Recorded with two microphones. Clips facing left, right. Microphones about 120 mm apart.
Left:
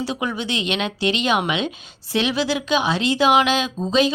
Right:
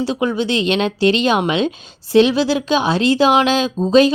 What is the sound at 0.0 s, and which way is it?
A woman's voice, 30° right (ahead or behind).